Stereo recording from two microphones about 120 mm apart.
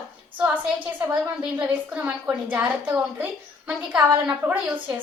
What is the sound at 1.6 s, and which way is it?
A woman's voice, 10° right (ahead or behind).